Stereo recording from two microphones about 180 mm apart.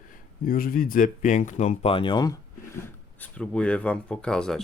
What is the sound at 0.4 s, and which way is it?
Speech, 55° left (ahead or behind).